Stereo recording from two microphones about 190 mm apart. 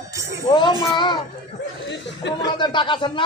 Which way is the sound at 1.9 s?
65° left (ahead or behind).